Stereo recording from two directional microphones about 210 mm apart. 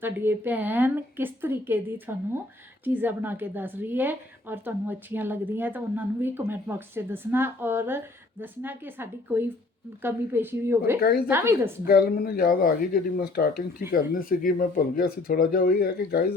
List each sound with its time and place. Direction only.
0.0 s a woman's voice: 10° right (ahead or behind)
11.0 s speech: 45° left (ahead or behind)
11.3 s a woman's voice: 10° right (ahead or behind)
11.9 s speech: 45° left (ahead or behind)